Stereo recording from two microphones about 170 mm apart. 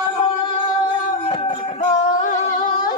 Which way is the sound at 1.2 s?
35° left (ahead or behind).